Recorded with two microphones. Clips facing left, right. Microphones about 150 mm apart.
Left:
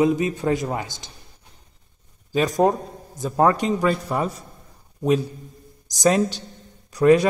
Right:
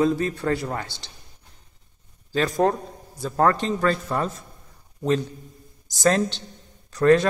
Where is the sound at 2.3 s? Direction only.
15° left (ahead or behind).